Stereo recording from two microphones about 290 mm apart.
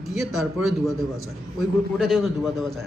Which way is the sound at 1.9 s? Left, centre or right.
Centre.